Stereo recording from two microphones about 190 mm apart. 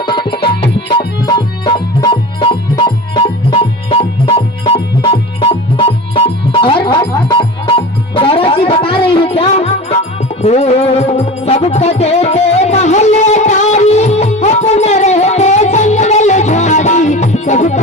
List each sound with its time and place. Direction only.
0.0 s music: 25° left (ahead or behind)